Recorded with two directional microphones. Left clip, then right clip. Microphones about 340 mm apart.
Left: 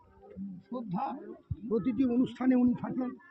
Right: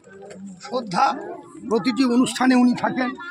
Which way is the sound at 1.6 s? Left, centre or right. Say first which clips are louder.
Right 10 dB; right.